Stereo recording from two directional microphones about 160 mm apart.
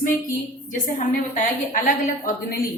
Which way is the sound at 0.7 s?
55° left (ahead or behind).